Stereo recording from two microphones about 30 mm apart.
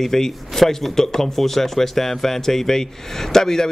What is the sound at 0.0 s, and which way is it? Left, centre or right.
A man's voice, centre.